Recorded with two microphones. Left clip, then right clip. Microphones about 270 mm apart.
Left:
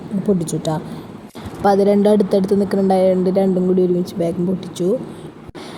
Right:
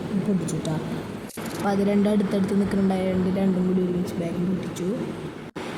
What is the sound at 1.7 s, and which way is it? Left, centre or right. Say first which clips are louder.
Speech: left 11 dB; centre.